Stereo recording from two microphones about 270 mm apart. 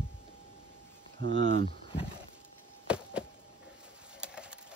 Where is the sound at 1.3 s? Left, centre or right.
Centre.